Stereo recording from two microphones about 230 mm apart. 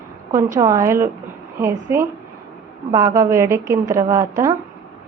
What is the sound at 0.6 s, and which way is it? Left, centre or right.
A woman's voice, centre.